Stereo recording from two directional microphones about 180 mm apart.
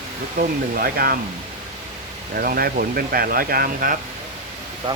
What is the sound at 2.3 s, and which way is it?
Speech, 55° right (ahead or behind).